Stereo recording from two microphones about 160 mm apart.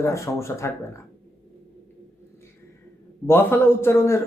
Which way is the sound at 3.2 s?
15° left (ahead or behind).